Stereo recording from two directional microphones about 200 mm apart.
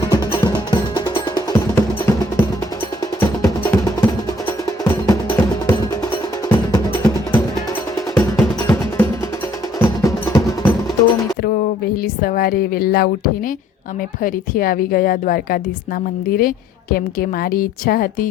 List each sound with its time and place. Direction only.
0.0 s music: 15° left (ahead or behind)
12.0 s a woman's voice: 45° left (ahead or behind)